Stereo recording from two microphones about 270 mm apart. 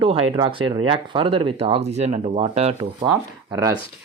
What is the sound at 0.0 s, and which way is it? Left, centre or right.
Speech, right.